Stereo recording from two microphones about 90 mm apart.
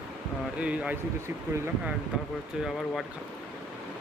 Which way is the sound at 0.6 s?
15° right (ahead or behind).